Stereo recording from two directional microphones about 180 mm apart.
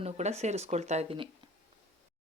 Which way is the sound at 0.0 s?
40° right (ahead or behind).